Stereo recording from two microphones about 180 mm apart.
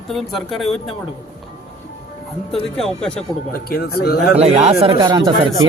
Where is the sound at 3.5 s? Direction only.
60° left (ahead or behind).